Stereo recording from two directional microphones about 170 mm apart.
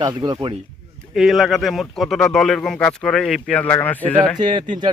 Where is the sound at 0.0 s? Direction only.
25° right (ahead or behind).